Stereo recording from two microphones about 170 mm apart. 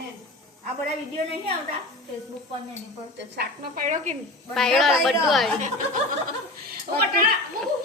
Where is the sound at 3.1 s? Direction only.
75° right (ahead or behind).